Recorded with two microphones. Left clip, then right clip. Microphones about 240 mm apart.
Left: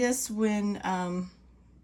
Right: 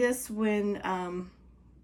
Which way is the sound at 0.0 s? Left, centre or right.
Centre.